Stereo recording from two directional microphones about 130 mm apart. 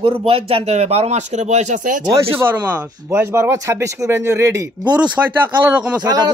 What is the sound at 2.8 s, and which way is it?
Speech, 30° right (ahead or behind).